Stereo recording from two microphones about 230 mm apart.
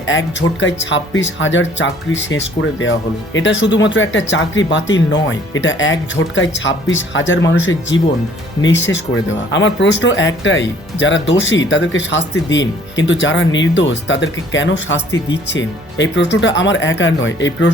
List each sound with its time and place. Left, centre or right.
0.0 s speech: left